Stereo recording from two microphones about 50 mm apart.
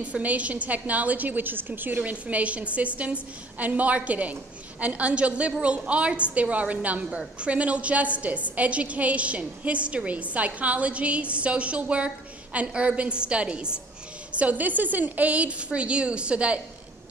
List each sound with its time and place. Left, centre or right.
0.0 s a woman's voice: right
14.4 s a woman's voice: right